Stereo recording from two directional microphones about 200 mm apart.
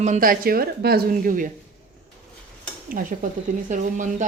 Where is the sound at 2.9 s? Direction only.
45° right (ahead or behind).